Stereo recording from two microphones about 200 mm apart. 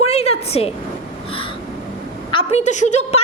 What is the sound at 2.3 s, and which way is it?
Speech, 30° left (ahead or behind).